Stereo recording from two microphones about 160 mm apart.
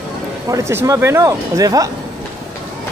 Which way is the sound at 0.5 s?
20° right (ahead or behind).